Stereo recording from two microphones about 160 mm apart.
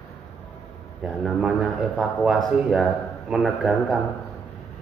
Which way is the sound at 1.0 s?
5° right (ahead or behind).